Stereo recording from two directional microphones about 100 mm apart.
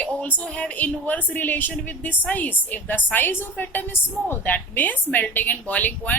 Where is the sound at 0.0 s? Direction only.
15° left (ahead or behind).